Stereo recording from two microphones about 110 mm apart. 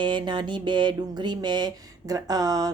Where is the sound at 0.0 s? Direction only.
45° right (ahead or behind).